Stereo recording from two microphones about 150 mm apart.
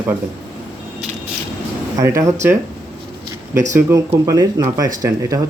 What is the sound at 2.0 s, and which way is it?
Speech, 20° right (ahead or behind).